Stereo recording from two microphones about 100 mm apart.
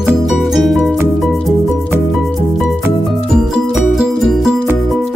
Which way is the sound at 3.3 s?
5° right (ahead or behind).